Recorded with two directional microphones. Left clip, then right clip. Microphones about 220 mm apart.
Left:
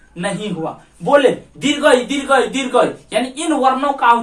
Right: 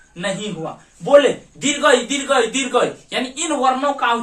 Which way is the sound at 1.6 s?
10° right (ahead or behind).